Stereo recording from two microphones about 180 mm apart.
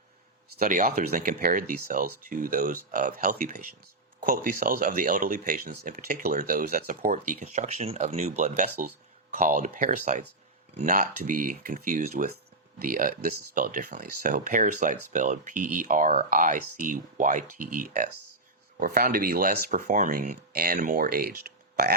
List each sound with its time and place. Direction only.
0.6 s speech: 50° right (ahead or behind)